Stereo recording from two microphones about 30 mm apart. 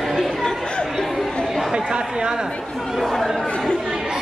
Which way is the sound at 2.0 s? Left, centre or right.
Right.